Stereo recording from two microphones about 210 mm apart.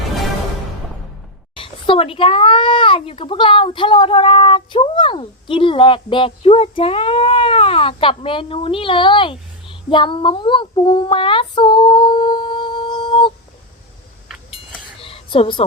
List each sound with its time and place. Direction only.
1.5 s a child's voice: 25° left (ahead or behind)
14.5 s chink: 25° left (ahead or behind)